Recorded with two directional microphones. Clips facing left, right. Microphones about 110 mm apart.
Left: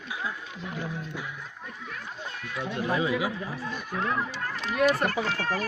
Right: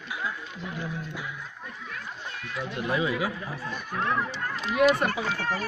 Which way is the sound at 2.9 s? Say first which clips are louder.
Even; 30° left (ahead or behind).